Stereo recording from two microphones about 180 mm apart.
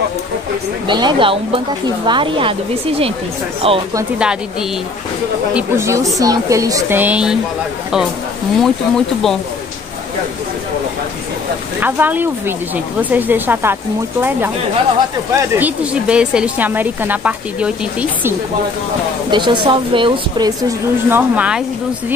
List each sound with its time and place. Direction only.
0.8 s speech: 25° right (ahead or behind)
3.6 s speech: 30° right (ahead or behind)
4.2 s a woman's voice: 5° right (ahead or behind)
8.5 s speech: centre (ahead or behind)
11.8 s a woman's voice: 10° right (ahead or behind)
15.3 s a woman's voice: 10° right (ahead or behind)
19.3 s speech: 25° right (ahead or behind)
21.1 s a woman's voice: 10° right (ahead or behind)